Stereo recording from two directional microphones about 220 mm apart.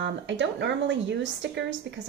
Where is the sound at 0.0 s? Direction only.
55° right (ahead or behind).